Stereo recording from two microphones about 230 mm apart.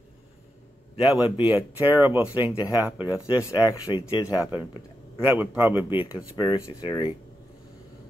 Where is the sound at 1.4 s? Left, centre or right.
Centre.